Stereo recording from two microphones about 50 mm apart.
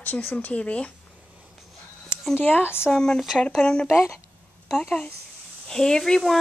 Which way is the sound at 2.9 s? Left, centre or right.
Centre.